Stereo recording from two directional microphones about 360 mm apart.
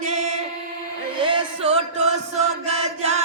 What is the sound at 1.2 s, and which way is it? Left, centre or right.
Music, centre.